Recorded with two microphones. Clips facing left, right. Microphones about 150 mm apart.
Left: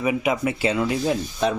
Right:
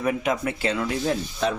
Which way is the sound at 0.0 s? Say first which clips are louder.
Left 2 dB; 5° left (ahead or behind).